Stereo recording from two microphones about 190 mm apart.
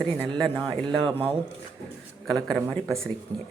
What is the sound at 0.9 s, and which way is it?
Speech, 30° right (ahead or behind).